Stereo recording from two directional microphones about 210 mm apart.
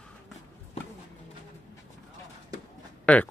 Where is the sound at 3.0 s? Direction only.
5° left (ahead or behind).